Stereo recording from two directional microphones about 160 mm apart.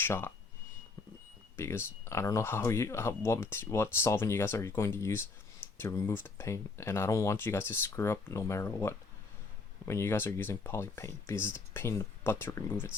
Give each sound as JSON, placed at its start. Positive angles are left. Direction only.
{"t": 0.0, "sound": "speech", "side_deg": 15}
{"t": 1.5, "sound": "speech", "side_deg": 15}